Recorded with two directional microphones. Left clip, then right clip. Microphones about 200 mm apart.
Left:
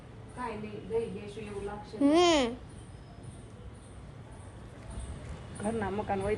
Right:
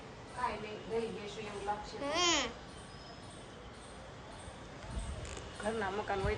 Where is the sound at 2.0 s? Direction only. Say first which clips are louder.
Left 9 dB; 10° left (ahead or behind).